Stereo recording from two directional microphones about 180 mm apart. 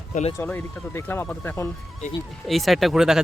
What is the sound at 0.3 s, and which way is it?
Speech, 10° left (ahead or behind).